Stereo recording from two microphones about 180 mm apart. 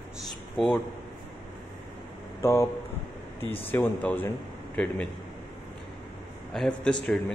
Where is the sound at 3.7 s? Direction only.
10° left (ahead or behind).